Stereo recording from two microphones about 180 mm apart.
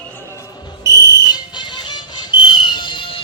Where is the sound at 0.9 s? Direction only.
20° right (ahead or behind).